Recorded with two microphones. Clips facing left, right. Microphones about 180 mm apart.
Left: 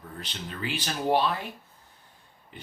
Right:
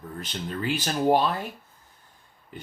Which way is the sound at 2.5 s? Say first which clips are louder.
Right 4 dB; 45° right (ahead or behind).